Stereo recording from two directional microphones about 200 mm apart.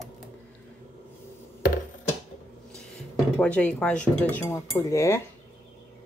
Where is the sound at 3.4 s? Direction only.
5° left (ahead or behind).